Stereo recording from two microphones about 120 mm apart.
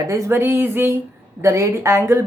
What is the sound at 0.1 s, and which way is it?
A woman's voice, 25° right (ahead or behind).